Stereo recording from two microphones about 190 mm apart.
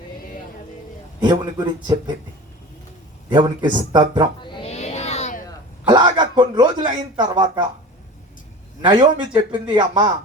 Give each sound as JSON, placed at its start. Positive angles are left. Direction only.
{"t": 1.2, "sound": "speech", "side_deg": -20}
{"t": 3.3, "sound": "speech", "side_deg": -25}
{"t": 4.6, "sound": "a sound", "side_deg": 35}
{"t": 5.9, "sound": "a man's voice", "side_deg": -25}
{"t": 8.9, "sound": "speech", "side_deg": -25}